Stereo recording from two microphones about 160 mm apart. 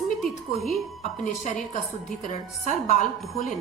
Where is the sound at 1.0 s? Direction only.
45° left (ahead or behind).